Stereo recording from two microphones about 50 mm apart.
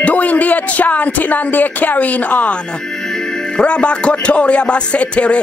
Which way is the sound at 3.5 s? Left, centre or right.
Left.